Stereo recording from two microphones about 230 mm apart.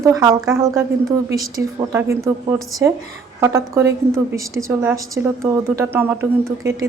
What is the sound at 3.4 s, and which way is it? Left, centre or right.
A woman's voice, centre.